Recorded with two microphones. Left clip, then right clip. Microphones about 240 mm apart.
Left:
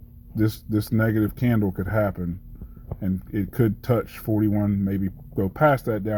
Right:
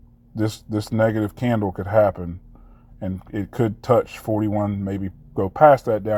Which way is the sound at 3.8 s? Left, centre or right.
Centre.